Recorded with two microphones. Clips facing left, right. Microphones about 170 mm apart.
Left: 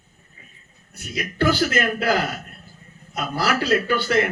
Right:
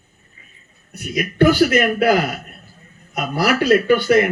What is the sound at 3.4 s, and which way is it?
Speech, 10° right (ahead or behind).